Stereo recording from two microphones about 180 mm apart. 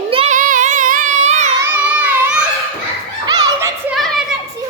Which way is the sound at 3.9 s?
Centre (ahead or behind).